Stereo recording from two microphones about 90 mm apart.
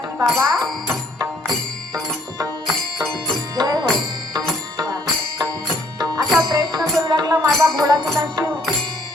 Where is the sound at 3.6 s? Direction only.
50° right (ahead or behind).